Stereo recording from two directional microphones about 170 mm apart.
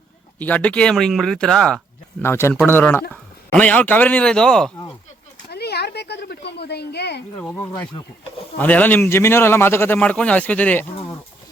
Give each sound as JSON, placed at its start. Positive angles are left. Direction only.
{"t": 0.3, "sound": "speech", "side_deg": 10}
{"t": 2.2, "sound": "a man's voice", "side_deg": 15}
{"t": 5.5, "sound": "a sound", "side_deg": 70}
{"t": 7.3, "sound": "a man's voice", "side_deg": 10}